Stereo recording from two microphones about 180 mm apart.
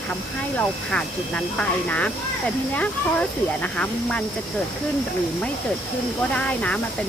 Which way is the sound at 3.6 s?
5° left (ahead or behind).